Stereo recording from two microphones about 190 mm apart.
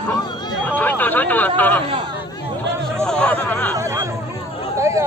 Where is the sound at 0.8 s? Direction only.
10° left (ahead or behind).